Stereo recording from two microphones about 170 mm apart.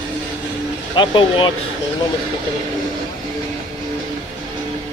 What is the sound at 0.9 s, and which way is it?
Speech, 30° left (ahead or behind).